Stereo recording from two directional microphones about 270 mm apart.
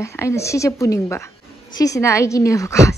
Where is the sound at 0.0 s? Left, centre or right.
Centre.